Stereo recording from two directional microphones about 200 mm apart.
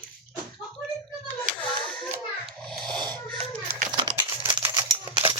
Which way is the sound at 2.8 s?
5° left (ahead or behind).